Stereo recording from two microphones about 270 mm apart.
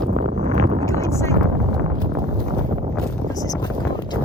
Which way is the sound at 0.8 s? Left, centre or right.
Centre.